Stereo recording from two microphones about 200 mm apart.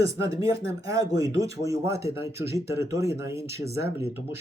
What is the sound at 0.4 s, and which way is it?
Speech, 15° right (ahead or behind).